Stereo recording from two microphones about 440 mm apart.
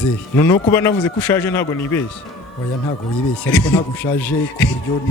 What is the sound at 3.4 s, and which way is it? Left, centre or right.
A man's voice, centre.